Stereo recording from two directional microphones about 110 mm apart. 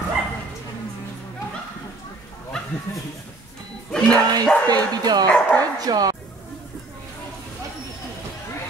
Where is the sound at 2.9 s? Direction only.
20° left (ahead or behind).